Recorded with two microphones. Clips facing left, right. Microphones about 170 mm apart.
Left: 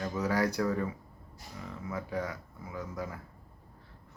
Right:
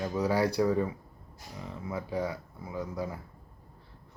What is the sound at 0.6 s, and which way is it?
Speech, 15° right (ahead or behind).